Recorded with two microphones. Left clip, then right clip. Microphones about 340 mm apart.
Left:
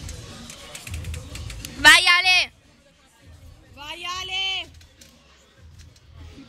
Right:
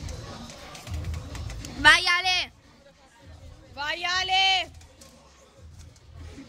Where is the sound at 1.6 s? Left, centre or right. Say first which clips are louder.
Left 5 dB; centre.